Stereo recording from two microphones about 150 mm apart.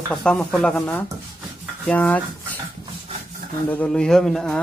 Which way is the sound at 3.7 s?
10° left (ahead or behind).